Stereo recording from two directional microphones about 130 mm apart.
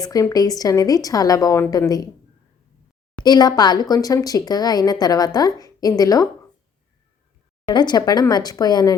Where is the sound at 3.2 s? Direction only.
30° left (ahead or behind).